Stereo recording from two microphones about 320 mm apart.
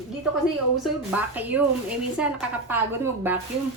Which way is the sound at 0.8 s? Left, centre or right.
Centre.